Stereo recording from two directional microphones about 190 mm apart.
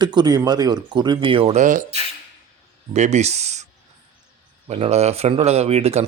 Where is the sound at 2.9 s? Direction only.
35° right (ahead or behind).